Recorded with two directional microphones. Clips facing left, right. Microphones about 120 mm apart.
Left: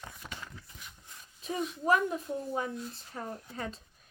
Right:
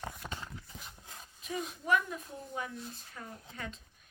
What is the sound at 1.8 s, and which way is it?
A woman's voice, 35° left (ahead or behind).